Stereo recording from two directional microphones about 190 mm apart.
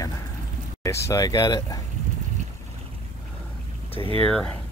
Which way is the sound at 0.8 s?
15° left (ahead or behind).